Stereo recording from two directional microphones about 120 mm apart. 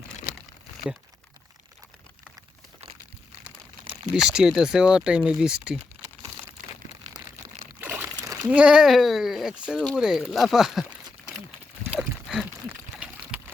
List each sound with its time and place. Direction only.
4.1 s speech: 5° right (ahead or behind)
7.8 s crunch: 20° right (ahead or behind)
8.4 s speech: 10° right (ahead or behind)
11.9 s a sound: centre (ahead or behind)